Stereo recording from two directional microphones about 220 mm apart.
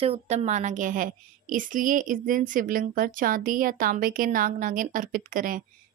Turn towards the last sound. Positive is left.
turn(degrees=-40)  # may be behind; listen again after turning